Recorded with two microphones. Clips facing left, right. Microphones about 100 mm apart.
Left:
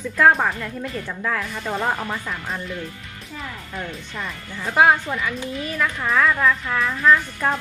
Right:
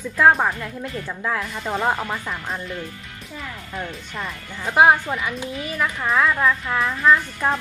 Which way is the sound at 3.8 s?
Centre (ahead or behind).